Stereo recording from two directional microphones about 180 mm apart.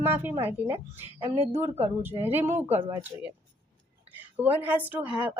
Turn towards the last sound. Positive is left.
turn(degrees=-10)  # may be behind; listen again after turning